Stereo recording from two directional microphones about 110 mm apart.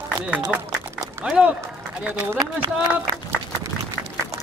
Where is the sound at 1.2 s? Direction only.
10° right (ahead or behind).